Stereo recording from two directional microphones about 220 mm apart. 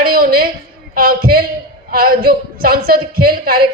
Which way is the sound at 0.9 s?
40° right (ahead or behind).